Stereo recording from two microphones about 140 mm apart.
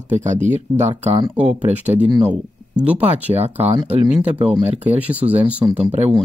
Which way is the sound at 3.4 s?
50° right (ahead or behind).